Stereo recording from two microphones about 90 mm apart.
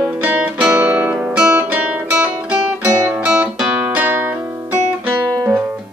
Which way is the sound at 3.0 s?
25° right (ahead or behind).